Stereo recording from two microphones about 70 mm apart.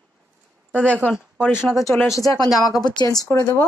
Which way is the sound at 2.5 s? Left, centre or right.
Centre.